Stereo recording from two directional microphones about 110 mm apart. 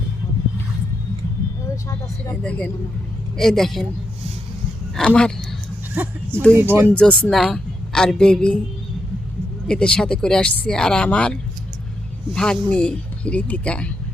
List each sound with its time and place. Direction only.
1.7 s vehicle: 30° left (ahead or behind)
2.3 s a woman's voice: 10° left (ahead or behind)
4.9 s speech: 5° left (ahead or behind)
5.9 s speech: 15° right (ahead or behind)
6.9 s speech: 10° left (ahead or behind)
9.6 s speech: 10° left (ahead or behind)